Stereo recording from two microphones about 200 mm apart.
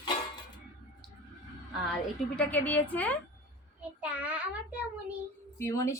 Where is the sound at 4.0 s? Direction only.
5° right (ahead or behind).